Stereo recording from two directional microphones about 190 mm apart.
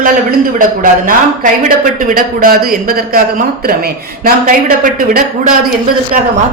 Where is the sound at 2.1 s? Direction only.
50° right (ahead or behind).